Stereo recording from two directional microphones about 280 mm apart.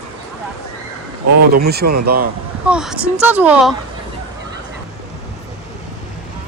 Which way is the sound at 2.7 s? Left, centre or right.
Centre.